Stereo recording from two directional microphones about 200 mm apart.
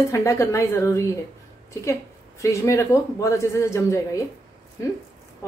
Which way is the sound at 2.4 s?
15° left (ahead or behind).